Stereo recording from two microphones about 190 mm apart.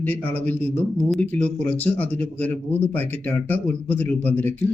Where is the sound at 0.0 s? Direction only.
10° left (ahead or behind).